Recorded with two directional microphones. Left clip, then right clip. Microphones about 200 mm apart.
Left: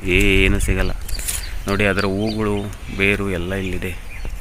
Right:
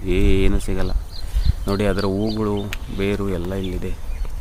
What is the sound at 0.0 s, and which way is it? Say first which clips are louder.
Speech: left 5 dB; centre (ahead or behind).